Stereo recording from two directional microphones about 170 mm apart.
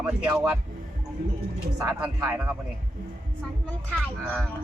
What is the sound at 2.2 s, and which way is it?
Speech, 15° right (ahead or behind).